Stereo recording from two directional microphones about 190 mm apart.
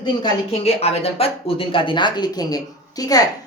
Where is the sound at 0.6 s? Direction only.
35° left (ahead or behind).